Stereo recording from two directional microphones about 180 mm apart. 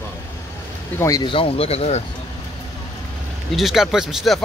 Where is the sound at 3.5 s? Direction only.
Centre (ahead or behind).